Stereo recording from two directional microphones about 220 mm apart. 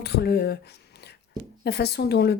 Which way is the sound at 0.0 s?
45° left (ahead or behind).